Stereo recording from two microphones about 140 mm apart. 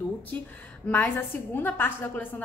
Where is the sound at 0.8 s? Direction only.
15° left (ahead or behind).